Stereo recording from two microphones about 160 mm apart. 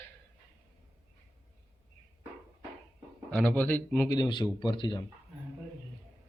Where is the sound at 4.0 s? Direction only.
25° left (ahead or behind).